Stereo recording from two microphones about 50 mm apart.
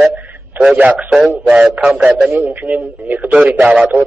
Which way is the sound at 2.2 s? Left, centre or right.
Right.